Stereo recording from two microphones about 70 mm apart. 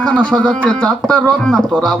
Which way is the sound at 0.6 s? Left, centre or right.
Centre.